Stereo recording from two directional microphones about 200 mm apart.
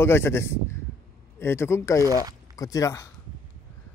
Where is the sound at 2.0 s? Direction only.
15° right (ahead or behind).